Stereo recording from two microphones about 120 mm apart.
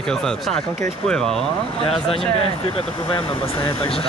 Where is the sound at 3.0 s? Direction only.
45° left (ahead or behind).